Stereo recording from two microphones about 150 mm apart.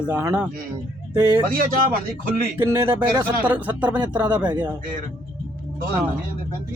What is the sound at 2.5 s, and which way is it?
Speech, 15° right (ahead or behind).